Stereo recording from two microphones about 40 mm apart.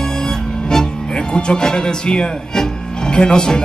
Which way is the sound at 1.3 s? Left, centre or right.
Left.